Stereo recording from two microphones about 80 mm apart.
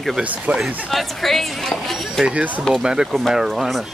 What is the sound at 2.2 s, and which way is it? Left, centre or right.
Speech, centre.